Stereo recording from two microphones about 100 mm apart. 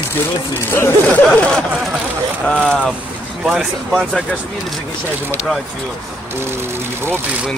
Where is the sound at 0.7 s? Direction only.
20° left (ahead or behind).